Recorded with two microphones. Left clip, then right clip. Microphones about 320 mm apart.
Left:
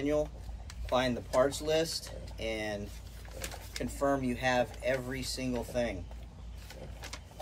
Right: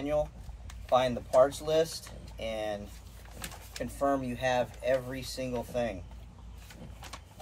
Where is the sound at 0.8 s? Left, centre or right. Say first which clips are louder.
Right 4 dB; centre.